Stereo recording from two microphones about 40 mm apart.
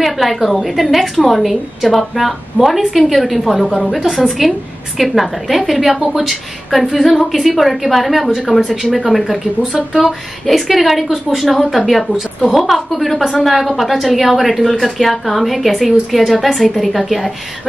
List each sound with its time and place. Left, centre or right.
0.0 s speech: centre